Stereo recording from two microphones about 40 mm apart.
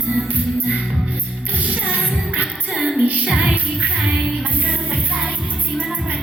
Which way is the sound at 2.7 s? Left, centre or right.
Centre.